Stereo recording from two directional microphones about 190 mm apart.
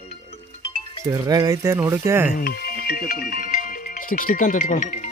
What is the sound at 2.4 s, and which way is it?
Speech, 55° left (ahead or behind).